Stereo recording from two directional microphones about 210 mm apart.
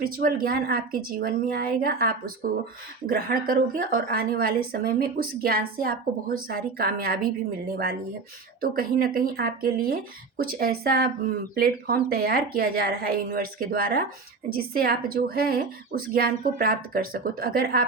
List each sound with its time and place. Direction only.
0.0 s a woman's voice: 45° right (ahead or behind)
8.6 s a woman's voice: 45° right (ahead or behind)